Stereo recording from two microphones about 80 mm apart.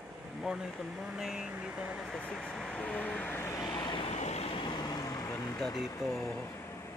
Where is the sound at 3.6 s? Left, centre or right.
Left.